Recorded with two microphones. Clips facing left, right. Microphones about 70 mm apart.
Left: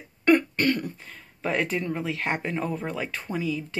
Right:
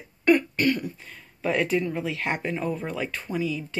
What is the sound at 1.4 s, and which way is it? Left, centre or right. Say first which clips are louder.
Speech: right 3 dB; left.